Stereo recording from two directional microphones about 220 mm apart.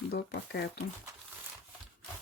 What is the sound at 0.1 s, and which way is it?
Speech, 50° left (ahead or behind).